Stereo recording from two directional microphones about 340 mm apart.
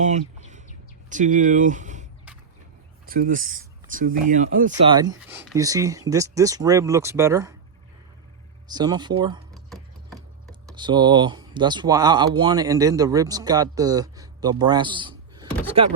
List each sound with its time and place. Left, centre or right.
0.0 s bird: right
1.1 s speech: right
3.1 s speech: right
4.9 s speech: centre
8.6 s speech: centre
9.6 s a sound: centre
10.8 s speech: centre